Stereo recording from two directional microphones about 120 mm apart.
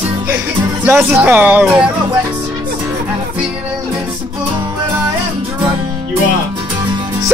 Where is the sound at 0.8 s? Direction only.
15° right (ahead or behind).